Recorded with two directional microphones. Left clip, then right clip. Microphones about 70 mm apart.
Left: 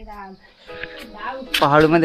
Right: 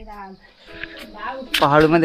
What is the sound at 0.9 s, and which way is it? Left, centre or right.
Music, left.